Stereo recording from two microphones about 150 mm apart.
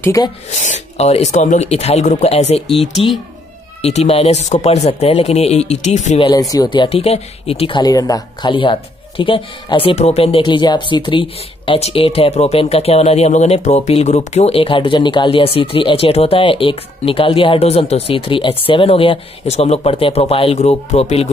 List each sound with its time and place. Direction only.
0.0 s speech: 20° left (ahead or behind)
0.6 s speech: 50° left (ahead or behind)
2.7 s speech: centre (ahead or behind)
3.8 s speech: 45° left (ahead or behind)
6.5 s speech: 30° left (ahead or behind)